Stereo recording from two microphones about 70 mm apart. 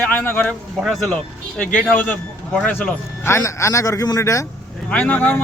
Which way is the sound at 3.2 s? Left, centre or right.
Left.